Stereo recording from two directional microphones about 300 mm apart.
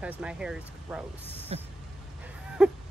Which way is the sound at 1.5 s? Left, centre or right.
Right.